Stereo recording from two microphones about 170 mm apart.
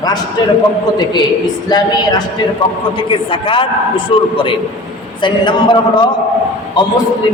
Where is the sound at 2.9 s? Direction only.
30° left (ahead or behind).